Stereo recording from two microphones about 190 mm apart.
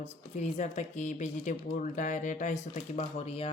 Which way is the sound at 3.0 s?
30° left (ahead or behind).